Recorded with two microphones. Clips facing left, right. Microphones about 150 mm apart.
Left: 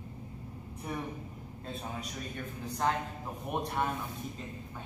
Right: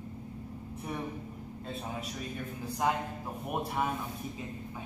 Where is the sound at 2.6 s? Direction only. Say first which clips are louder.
Right 1 dB; 10° right (ahead or behind).